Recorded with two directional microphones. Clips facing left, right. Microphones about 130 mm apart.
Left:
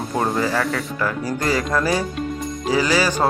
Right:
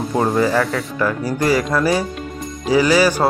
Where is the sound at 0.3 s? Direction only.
15° right (ahead or behind).